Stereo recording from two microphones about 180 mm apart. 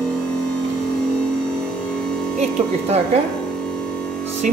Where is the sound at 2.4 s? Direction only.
35° right (ahead or behind).